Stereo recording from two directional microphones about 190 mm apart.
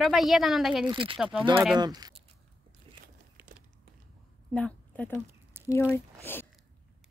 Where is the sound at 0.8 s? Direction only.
25° right (ahead or behind).